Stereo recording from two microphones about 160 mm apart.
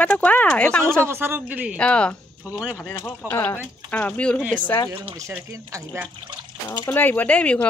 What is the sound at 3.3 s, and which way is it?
Speech, 15° left (ahead or behind).